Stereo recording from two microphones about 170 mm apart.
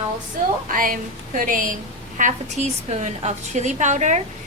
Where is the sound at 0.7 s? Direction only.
55° right (ahead or behind).